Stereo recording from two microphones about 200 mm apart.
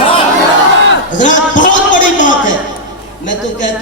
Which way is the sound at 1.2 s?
40° left (ahead or behind).